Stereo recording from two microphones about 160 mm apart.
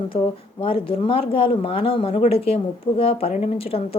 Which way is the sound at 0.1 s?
35° left (ahead or behind).